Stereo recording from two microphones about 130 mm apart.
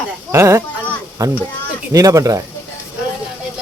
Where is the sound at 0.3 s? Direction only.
20° right (ahead or behind).